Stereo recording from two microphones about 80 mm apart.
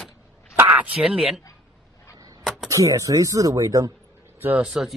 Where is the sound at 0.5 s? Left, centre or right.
Right.